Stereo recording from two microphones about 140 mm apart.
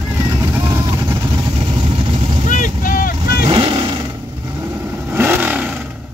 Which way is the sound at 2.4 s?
75° left (ahead or behind).